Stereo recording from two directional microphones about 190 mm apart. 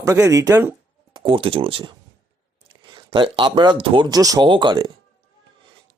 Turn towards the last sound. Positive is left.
turn(degrees=-25)  # may be behind; listen again after turning